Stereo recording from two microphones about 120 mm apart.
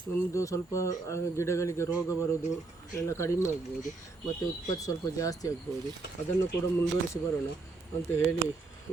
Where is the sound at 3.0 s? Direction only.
25° left (ahead or behind).